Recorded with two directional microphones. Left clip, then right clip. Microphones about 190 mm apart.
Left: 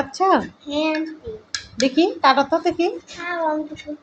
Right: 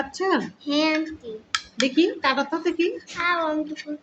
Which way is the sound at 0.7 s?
40° right (ahead or behind).